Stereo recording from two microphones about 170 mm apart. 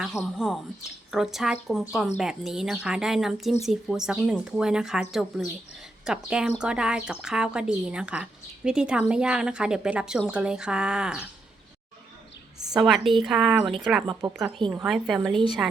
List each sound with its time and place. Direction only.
0.0 s speech: centre (ahead or behind)
12.7 s speech: centre (ahead or behind)
14.1 s speech: 20° right (ahead or behind)
14.7 s speech: 5° right (ahead or behind)